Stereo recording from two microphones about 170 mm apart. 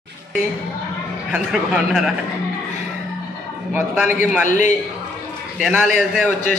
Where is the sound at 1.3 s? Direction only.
5° right (ahead or behind).